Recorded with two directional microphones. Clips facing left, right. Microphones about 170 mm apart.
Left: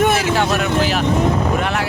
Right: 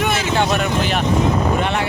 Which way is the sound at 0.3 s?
Centre (ahead or behind).